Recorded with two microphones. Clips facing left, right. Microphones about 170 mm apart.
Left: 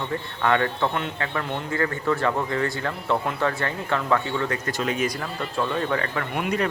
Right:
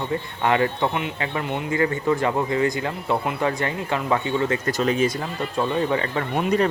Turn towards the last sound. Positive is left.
turn(degrees=-30)  # may be behind; listen again after turning